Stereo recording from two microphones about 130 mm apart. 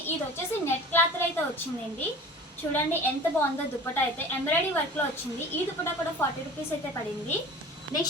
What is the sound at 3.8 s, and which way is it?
A woman's voice, 15° left (ahead or behind).